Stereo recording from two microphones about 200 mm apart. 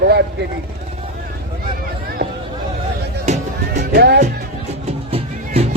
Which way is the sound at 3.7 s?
55° right (ahead or behind).